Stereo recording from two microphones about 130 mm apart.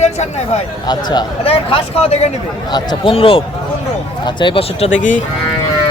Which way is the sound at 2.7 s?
35° left (ahead or behind).